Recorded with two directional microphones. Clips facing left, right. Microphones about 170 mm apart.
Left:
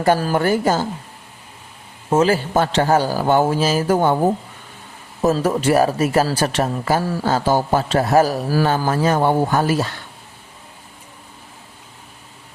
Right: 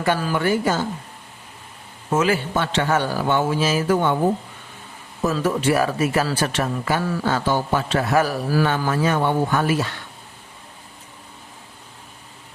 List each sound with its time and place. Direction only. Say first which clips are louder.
0.0 s a man's voice: left 4 dB; 40° left (ahead or behind)
2.0 s a man's voice: left 4 dB; 35° left (ahead or behind)
5.2 s a man's voice: left 3 dB; 40° left (ahead or behind)